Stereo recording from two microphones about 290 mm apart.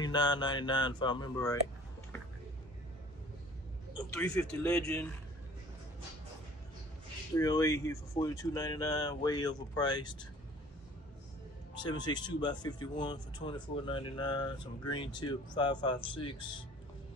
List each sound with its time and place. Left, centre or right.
0.0 s speech: centre
4.1 s speech: centre
7.3 s speech: centre
11.7 s speech: centre